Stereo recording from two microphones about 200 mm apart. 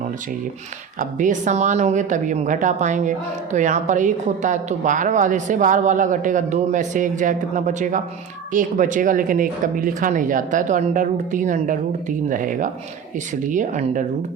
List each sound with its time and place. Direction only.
0.9 s a woman's voice: 40° right (ahead or behind)